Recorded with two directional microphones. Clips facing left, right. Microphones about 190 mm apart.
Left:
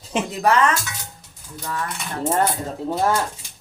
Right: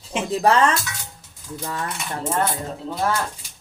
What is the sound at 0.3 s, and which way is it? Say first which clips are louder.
Speech: right 2 dB; 30° right (ahead or behind).